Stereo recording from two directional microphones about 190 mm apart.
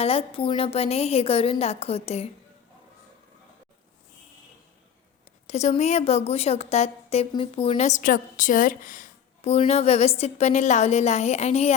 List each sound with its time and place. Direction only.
0.0 s a woman's voice: 30° left (ahead or behind)
5.5 s a woman's voice: 35° left (ahead or behind)